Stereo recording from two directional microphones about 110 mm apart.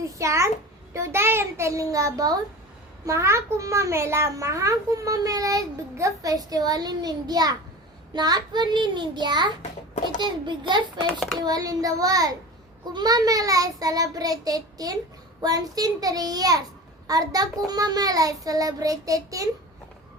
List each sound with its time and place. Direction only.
0.0 s a child's voice: 25° right (ahead or behind); by 10.8 s 45° right (ahead or behind)
11.0 s a child's voice: 5° left (ahead or behind)
11.3 s a child's voice: 35° right (ahead or behind)